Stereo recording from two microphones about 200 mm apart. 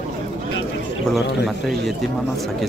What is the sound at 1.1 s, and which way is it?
Speech, centre (ahead or behind).